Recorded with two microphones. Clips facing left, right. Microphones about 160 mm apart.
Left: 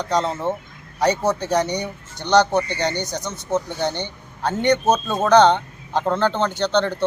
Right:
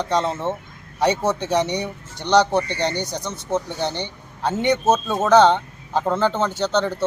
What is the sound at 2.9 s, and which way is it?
Speech, 30° right (ahead or behind).